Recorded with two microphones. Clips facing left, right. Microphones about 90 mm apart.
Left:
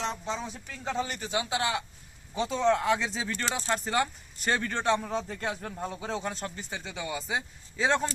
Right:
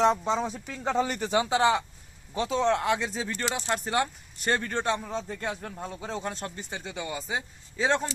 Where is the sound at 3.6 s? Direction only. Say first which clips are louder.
Even; centre (ahead or behind).